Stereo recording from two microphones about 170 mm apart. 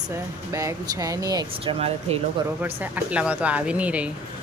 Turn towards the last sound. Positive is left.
turn(degrees=-10)  # may be behind; listen again after turning